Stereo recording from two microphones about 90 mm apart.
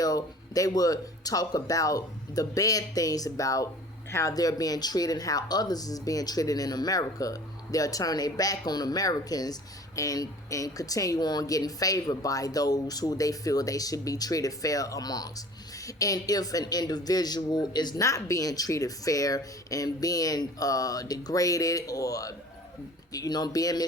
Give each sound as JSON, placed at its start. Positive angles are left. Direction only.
{"t": 0.0, "sound": "speech", "side_deg": 40}